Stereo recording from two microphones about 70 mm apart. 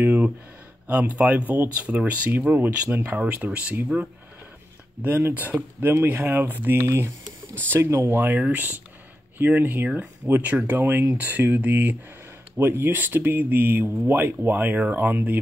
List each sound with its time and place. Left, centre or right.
0.0 s speech: right
3.2 s speech: centre
6.8 s speech: right
7.7 s speech: right